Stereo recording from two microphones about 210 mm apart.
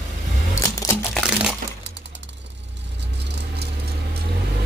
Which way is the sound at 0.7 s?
15° left (ahead or behind).